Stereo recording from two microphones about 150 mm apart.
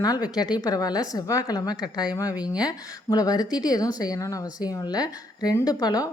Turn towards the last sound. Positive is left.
turn(degrees=25)  # may be behind; listen again after turning